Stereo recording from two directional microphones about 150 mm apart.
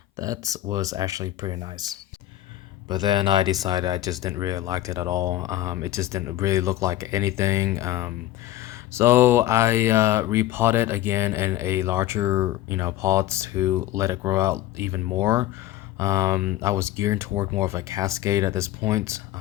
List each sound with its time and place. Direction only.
0.2 s speech: 25° right (ahead or behind)